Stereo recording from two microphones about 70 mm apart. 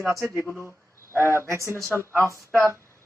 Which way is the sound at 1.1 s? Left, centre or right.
Right.